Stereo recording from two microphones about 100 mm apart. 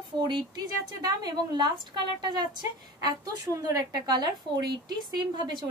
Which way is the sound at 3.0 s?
40° right (ahead or behind).